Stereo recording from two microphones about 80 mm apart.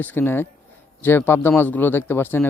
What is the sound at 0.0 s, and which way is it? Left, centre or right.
A man's voice, left.